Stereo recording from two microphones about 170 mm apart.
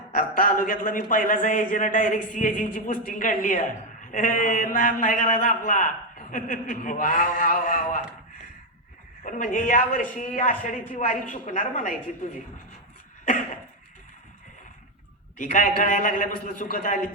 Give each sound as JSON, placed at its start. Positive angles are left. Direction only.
{"t": 0.1, "sound": "a man's voice", "side_deg": 55}
{"t": 9.2, "sound": "a man's voice", "side_deg": 50}
{"t": 15.4, "sound": "a man's voice", "side_deg": 50}